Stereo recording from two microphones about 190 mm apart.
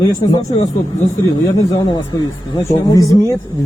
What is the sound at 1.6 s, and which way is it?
Speech, 20° left (ahead or behind).